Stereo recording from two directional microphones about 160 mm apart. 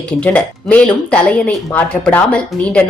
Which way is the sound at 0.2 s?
10° left (ahead or behind).